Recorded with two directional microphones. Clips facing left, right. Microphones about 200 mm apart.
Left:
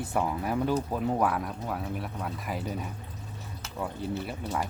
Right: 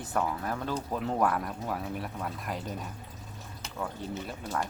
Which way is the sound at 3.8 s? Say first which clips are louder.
Left 3 dB; 5° left (ahead or behind).